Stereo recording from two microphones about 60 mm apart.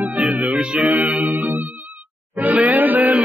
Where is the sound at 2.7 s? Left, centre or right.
Right.